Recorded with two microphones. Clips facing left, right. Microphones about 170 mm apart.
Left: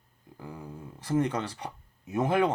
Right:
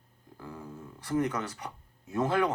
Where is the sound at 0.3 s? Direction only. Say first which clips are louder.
Left 1 dB; 15° left (ahead or behind).